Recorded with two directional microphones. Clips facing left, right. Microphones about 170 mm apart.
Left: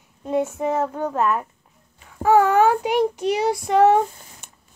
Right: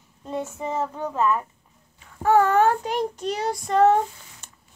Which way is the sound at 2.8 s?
70° left (ahead or behind).